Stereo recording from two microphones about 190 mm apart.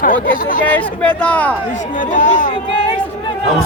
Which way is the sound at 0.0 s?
45° left (ahead or behind).